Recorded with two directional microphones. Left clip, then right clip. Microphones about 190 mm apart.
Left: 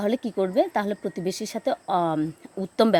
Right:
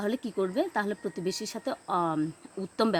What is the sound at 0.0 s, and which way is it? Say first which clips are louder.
Speech: left 5 dB; 25° left (ahead or behind).